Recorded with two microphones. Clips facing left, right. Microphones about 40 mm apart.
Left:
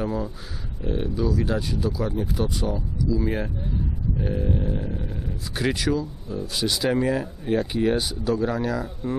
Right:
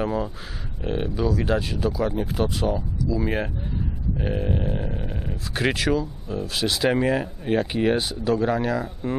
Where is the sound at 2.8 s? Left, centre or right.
Centre.